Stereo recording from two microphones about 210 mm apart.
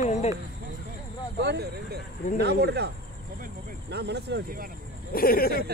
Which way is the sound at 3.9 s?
50° right (ahead or behind).